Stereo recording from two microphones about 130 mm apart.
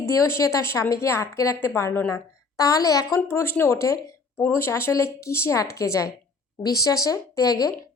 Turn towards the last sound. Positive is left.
turn(degrees=30)  # may be behind; listen again after turning